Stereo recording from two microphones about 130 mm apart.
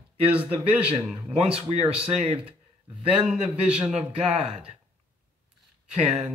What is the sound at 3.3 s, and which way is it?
Speech, 10° right (ahead or behind).